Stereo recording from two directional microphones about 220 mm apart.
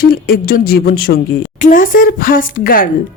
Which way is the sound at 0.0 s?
40° left (ahead or behind).